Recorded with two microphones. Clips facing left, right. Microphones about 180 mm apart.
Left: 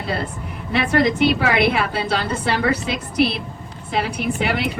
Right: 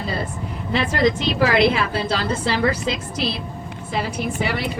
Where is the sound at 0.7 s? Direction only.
60° left (ahead or behind).